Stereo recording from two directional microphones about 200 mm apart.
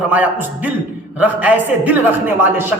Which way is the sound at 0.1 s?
10° right (ahead or behind).